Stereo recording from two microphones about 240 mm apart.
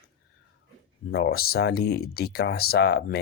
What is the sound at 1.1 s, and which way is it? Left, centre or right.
Speech, left.